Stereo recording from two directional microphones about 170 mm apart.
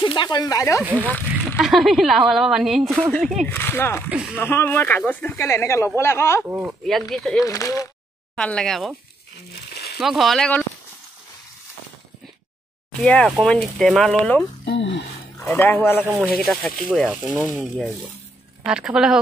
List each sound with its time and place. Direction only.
0.0 s speech: 25° left (ahead or behind)
0.8 s a woman's voice: 10° right (ahead or behind); by 4.0 s 15° left (ahead or behind)
4.1 s speech: 5° right (ahead or behind)
4.4 s speech: 10° left (ahead or behind)
6.4 s speech: 10° right (ahead or behind)
6.9 s a woman's voice: centre (ahead or behind)
7.4 s speech: 20° left (ahead or behind)
8.4 s a woman's voice: 5° left (ahead or behind)
9.9 s a woman's voice: centre (ahead or behind)
13.0 s a woman's voice: 5° left (ahead or behind)
14.6 s speech: 90° left
15.4 s speech: 10° left (ahead or behind)
16.1 s a woman's voice: 5° right (ahead or behind)
18.7 s a woman's voice: 5° right (ahead or behind)